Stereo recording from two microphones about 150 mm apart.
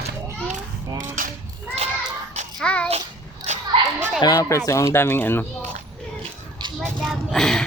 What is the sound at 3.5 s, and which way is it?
Children playing, 50° right (ahead or behind).